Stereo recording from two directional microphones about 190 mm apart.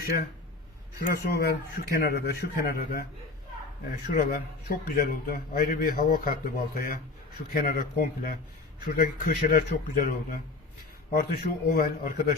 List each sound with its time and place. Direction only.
0.9 s a man's voice: 55° left (ahead or behind)